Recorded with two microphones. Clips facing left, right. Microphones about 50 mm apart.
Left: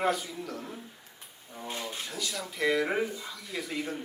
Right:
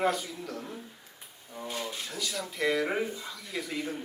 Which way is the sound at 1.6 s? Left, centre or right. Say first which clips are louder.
Right 1 dB; left.